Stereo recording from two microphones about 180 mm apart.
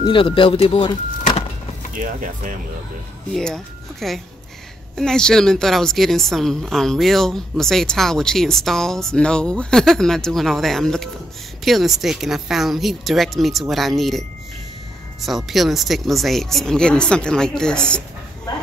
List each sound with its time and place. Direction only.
0.0 s vehicle: 30° left (ahead or behind)
2.0 s speech: 45° right (ahead or behind)
3.3 s a woman's voice: centre (ahead or behind)
15.2 s a woman's voice: centre (ahead or behind)